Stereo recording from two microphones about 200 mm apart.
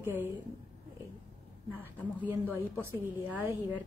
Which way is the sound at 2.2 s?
10° right (ahead or behind).